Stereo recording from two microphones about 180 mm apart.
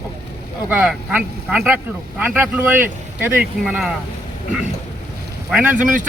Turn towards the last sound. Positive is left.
turn(degrees=-10)  # may be behind; listen again after turning